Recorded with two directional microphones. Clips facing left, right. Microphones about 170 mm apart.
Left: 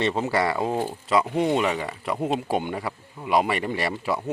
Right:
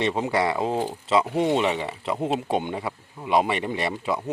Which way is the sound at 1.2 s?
5° right (ahead or behind).